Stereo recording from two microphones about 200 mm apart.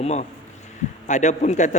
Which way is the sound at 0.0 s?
35° left (ahead or behind).